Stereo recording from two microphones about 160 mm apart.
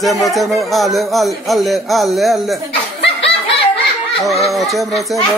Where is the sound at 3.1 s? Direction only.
35° left (ahead or behind).